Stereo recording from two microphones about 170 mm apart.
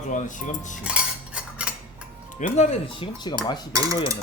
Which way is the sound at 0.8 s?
5° right (ahead or behind).